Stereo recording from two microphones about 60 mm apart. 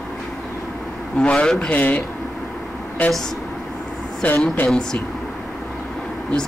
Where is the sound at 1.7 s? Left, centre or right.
Left.